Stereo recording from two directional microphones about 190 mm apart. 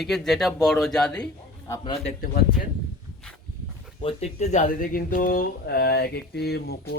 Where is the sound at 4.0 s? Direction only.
30° left (ahead or behind).